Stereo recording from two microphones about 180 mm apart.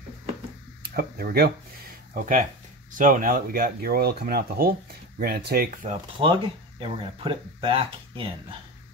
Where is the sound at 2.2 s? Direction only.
50° right (ahead or behind).